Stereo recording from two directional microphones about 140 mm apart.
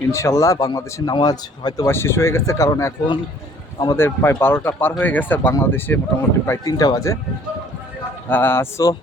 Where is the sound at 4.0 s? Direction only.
15° left (ahead or behind).